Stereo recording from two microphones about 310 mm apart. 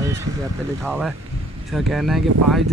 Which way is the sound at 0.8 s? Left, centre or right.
Centre.